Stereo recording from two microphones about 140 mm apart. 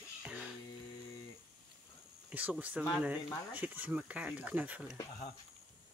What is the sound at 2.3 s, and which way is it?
Speech, 10° right (ahead or behind).